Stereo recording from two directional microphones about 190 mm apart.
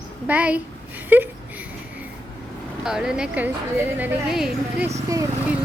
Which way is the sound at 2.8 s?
5° right (ahead or behind).